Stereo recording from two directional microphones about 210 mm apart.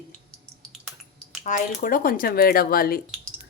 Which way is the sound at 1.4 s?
40° left (ahead or behind).